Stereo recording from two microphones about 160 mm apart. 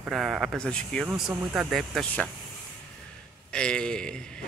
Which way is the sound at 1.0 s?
10° right (ahead or behind).